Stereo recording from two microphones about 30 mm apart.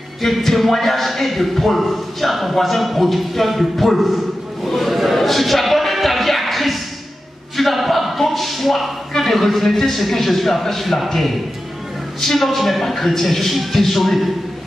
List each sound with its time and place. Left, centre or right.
0.2 s speech: centre
4.6 s music: centre
7.5 s a sound: centre
9.1 s speech: centre